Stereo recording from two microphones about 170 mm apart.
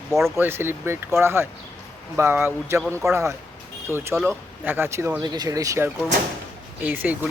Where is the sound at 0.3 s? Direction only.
15° right (ahead or behind).